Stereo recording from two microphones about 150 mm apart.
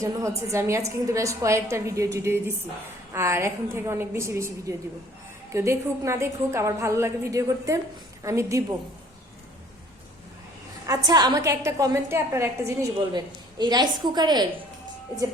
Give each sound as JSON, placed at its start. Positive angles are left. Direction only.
{"t": 0.0, "sound": "a woman's voice", "side_deg": -20}
{"t": 10.8, "sound": "a woman's voice", "side_deg": -25}